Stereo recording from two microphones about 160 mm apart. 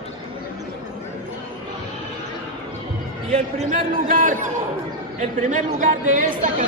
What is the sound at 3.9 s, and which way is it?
Speech, 55° right (ahead or behind).